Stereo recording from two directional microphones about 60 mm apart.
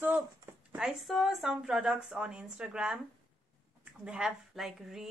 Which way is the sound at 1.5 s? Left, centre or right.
Centre.